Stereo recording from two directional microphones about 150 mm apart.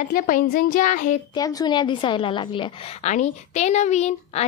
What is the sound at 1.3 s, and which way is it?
A woman's voice, 25° left (ahead or behind).